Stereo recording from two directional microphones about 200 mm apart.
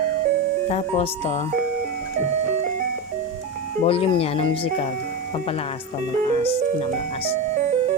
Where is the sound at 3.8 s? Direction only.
30° left (ahead or behind).